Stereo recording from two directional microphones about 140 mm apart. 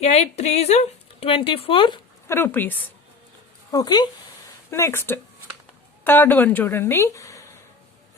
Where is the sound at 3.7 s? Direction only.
30° left (ahead or behind).